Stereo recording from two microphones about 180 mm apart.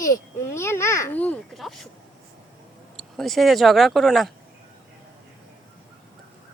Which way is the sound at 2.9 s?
Centre (ahead or behind).